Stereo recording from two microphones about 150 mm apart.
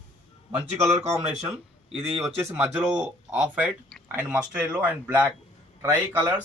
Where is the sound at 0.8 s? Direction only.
45° right (ahead or behind).